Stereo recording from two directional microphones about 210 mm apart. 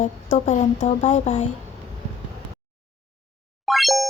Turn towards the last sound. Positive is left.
turn(degrees=0)  # may be behind; listen again after turning